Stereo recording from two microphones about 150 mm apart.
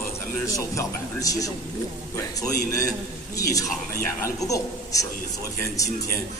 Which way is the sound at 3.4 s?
20° left (ahead or behind).